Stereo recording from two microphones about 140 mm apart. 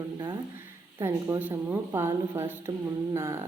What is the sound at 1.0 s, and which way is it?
A woman's voice, 20° right (ahead or behind).